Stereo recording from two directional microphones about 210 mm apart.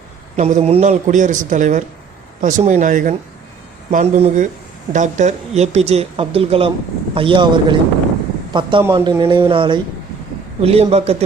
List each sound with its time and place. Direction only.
0.3 s speech: 30° right (ahead or behind)
8.8 s speech: 15° right (ahead or behind)